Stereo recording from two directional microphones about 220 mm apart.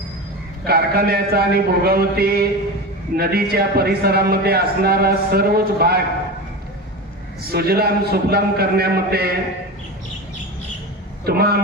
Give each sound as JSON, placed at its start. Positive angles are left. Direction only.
{"t": 0.7, "sound": "a man's voice", "side_deg": -45}
{"t": 7.5, "sound": "a man's voice", "side_deg": -45}
{"t": 11.3, "sound": "a man's voice", "side_deg": -45}